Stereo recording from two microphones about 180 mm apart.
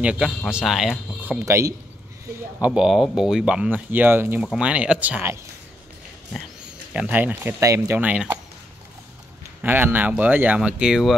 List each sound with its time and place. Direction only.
0.0 s speech: 5° right (ahead or behind)
1.4 s speech: 15° right (ahead or behind)
2.6 s speech: 5° right (ahead or behind)
6.9 s speech: 5° right (ahead or behind)
9.6 s speech: 10° right (ahead or behind)